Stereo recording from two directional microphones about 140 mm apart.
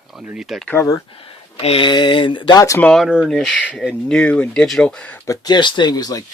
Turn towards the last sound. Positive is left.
turn(degrees=25)  # may be behind; listen again after turning